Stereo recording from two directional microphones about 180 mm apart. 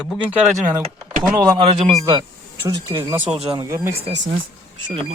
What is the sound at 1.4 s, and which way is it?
Speech, 20° right (ahead or behind).